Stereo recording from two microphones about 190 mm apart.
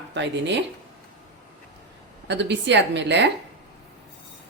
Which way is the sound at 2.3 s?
65° right (ahead or behind).